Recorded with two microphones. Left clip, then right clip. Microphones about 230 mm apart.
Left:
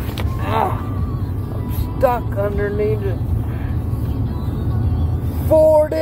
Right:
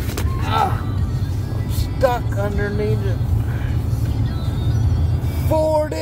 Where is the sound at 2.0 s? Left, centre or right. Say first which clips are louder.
Left 2 dB; centre.